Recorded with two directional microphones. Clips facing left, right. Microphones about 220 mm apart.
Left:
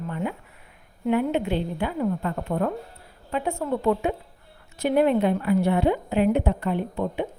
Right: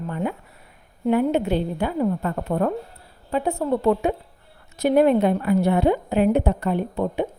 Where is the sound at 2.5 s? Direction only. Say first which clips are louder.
Right 3 dB; 50° right (ahead or behind).